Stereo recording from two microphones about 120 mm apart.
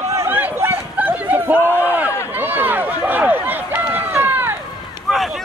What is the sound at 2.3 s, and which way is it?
Run, 15° right (ahead or behind).